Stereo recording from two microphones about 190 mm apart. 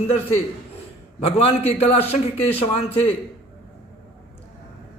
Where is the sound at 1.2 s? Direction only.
35° left (ahead or behind).